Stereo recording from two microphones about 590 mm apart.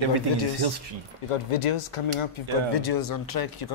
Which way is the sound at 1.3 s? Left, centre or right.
Left.